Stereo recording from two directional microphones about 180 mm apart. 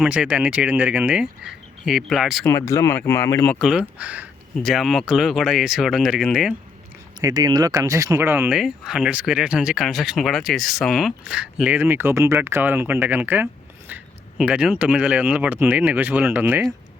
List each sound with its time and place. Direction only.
0.0 s speech: 5° right (ahead or behind)
2.4 s speech: 15° left (ahead or behind); by 6.6 s centre (ahead or behind)
7.2 s speech: 20° right (ahead or behind)